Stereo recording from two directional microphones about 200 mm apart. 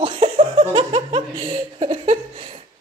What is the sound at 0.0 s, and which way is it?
Laughter, 25° right (ahead or behind).